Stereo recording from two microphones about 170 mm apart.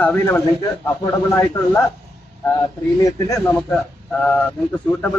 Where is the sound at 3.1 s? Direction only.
20° left (ahead or behind).